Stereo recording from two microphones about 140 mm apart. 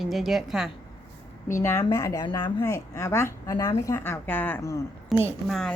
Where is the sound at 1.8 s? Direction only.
25° left (ahead or behind).